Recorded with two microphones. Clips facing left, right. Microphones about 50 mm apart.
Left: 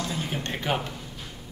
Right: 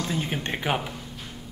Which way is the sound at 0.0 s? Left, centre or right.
Right.